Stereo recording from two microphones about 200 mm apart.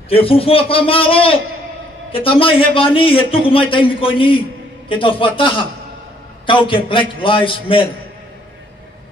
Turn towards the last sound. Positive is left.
turn(degrees=25)  # may be behind; listen again after turning